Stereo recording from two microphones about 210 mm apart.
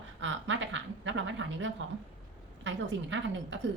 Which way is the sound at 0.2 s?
60° right (ahead or behind).